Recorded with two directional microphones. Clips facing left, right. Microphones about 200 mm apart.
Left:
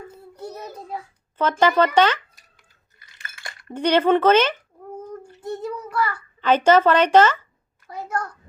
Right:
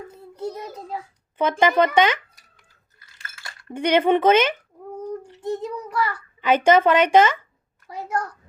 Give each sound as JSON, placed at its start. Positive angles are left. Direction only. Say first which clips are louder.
{"t": 1.4, "sound": "speech", "louder": "even", "side_deg": -15}
{"t": 3.3, "sound": "a sound", "louder": "left 4 dB", "side_deg": 20}
{"t": 3.8, "sound": "a child's voice", "louder": "left 1 dB", "side_deg": -15}